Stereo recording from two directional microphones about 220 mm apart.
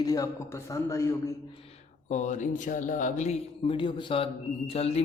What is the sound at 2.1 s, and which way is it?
Speech, 35° left (ahead or behind).